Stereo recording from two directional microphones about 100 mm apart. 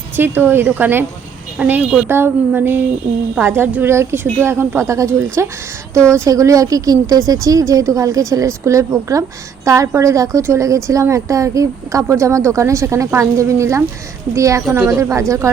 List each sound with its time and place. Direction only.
0.2 s a woman's voice: 20° right (ahead or behind)